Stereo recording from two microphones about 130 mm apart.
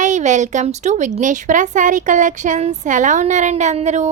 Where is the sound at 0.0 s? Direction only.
70° right (ahead or behind).